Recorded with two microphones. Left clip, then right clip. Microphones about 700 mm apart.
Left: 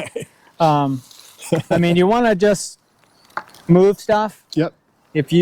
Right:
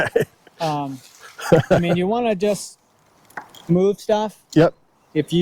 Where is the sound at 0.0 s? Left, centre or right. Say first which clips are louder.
Right 9 dB; centre.